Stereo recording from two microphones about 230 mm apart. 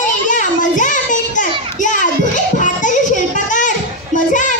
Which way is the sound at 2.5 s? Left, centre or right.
Left.